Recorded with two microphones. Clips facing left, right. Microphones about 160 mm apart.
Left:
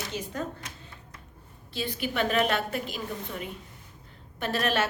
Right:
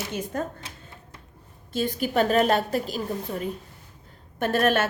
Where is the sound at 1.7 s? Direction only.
45° right (ahead or behind).